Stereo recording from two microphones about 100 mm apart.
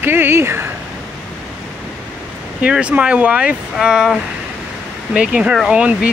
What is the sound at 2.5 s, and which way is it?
Speech, 10° right (ahead or behind).